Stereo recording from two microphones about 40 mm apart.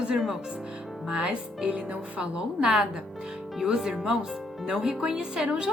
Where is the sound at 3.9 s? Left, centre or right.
Centre.